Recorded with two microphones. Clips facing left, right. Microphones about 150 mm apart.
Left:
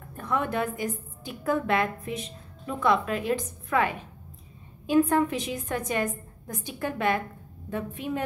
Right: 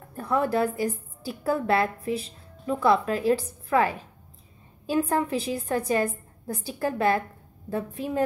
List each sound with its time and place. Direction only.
0.1 s a woman's voice: 35° right (ahead or behind)